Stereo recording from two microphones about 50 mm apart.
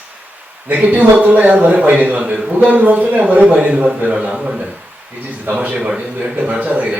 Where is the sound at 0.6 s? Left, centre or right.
Right.